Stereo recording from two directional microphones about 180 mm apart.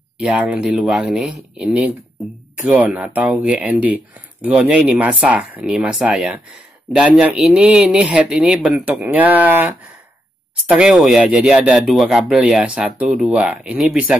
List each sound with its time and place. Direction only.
0.2 s speech: 5° right (ahead or behind)
10.7 s speech: 5° right (ahead or behind)